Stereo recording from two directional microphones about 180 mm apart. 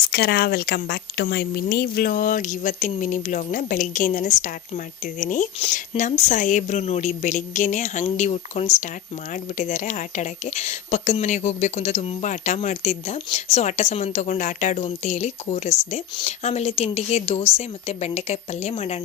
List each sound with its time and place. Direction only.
0.1 s speech: 60° left (ahead or behind); by 18.9 s 35° left (ahead or behind)